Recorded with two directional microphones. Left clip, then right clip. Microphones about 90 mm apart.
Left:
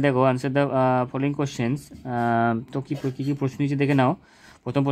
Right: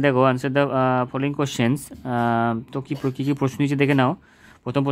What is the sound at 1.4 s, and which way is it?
Speech, 35° right (ahead or behind).